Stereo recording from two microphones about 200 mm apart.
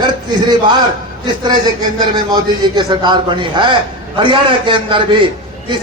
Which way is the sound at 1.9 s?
20° right (ahead or behind).